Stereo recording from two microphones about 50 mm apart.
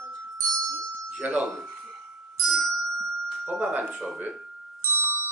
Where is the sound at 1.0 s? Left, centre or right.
Right.